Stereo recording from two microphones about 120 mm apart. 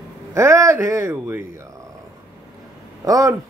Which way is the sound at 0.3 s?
25° right (ahead or behind).